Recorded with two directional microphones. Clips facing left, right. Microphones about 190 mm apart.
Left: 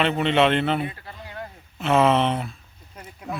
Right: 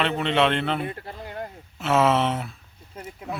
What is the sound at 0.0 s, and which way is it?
Speech, centre (ahead or behind).